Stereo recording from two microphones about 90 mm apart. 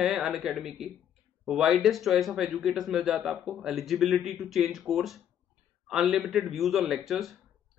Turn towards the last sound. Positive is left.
turn(degrees=0)  # may be behind; listen again after turning